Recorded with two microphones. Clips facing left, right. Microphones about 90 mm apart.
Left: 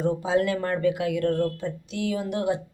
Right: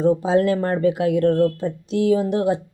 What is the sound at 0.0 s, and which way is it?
Speech, 35° right (ahead or behind).